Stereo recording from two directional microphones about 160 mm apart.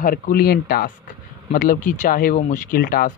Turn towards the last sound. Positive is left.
turn(degrees=65)  # may be behind; listen again after turning